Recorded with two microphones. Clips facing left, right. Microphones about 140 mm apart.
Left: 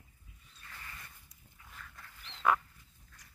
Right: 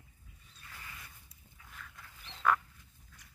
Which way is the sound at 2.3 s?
15° right (ahead or behind).